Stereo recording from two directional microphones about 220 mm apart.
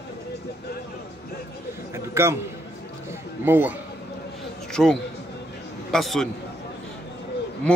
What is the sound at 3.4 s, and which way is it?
Speech, 10° right (ahead or behind).